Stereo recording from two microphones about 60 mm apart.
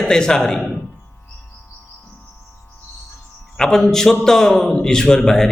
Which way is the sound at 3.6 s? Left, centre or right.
Centre.